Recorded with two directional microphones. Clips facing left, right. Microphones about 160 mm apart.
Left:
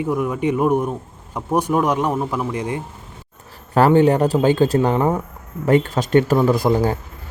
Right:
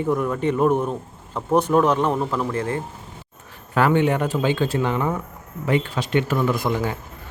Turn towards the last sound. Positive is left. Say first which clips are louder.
# left 6 dB
turn(degrees=35)  # may be behind; listen again after turning